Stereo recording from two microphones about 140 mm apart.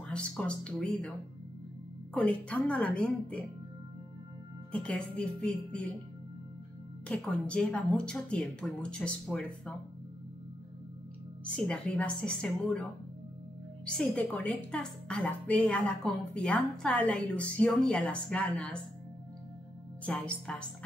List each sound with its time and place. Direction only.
0.0 s a woman's voice: 5° left (ahead or behind)
2.1 s a woman's voice: 10° left (ahead or behind)
4.7 s a woman's voice: 5° left (ahead or behind)
7.1 s a woman's voice: 5° left (ahead or behind)
11.4 s a woman's voice: 10° left (ahead or behind)
13.8 s a woman's voice: 5° left (ahead or behind)
20.1 s a woman's voice: 5° left (ahead or behind)